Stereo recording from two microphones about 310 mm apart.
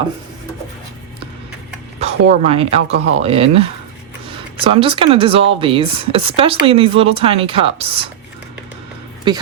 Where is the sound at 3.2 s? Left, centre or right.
Centre.